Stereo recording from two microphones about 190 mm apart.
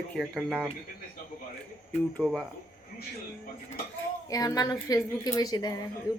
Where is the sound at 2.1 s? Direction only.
Centre (ahead or behind).